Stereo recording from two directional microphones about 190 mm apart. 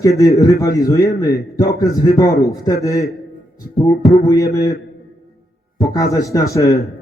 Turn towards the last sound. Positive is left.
turn(degrees=15)  # may be behind; listen again after turning